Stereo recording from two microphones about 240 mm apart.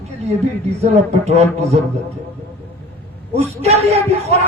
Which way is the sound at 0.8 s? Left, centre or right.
Right.